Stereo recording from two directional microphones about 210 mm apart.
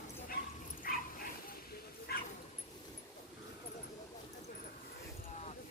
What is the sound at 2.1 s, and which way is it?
Bow-wow, 50° left (ahead or behind).